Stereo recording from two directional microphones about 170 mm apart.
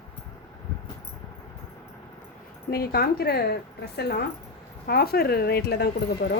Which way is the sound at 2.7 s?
65° left (ahead or behind).